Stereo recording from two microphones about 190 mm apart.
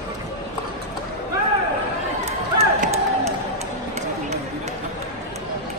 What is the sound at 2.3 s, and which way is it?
Run, 35° right (ahead or behind).